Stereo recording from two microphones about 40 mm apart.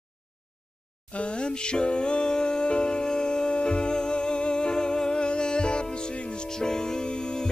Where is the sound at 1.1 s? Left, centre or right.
Left.